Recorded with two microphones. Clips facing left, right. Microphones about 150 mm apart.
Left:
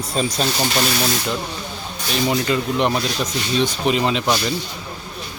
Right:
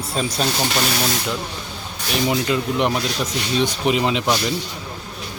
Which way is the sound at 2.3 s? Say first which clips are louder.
Left 1 dB; 10° right (ahead or behind).